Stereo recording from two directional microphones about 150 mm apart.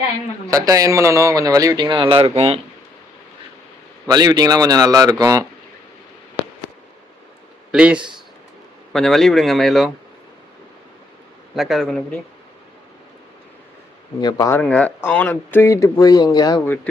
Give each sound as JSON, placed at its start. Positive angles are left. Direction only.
{"t": 0.5, "sound": "speech", "side_deg": -20}
{"t": 4.1, "sound": "speech", "side_deg": -25}
{"t": 7.7, "sound": "a man's voice", "side_deg": -5}
{"t": 11.5, "sound": "speech", "side_deg": 0}
{"t": 14.2, "sound": "speech", "side_deg": 25}
{"t": 14.6, "sound": "speech", "side_deg": 10}